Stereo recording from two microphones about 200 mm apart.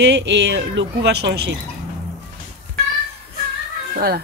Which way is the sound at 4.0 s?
50° right (ahead or behind).